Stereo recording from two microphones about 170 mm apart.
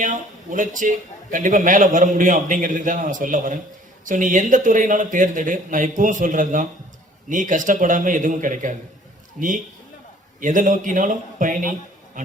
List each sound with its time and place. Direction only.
0.0 s a man's voice: 50° right (ahead or behind)
9.4 s a man's voice: 5° left (ahead or behind)
10.4 s a man's voice: 50° right (ahead or behind)